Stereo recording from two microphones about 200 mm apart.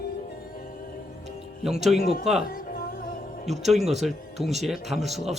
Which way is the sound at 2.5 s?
45° left (ahead or behind).